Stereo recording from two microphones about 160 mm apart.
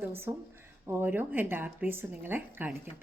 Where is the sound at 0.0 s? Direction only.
15° right (ahead or behind).